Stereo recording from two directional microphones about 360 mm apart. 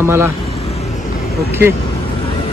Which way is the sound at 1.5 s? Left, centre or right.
Centre.